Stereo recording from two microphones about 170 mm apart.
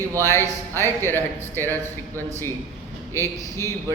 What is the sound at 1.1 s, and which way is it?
Speech, 15° left (ahead or behind).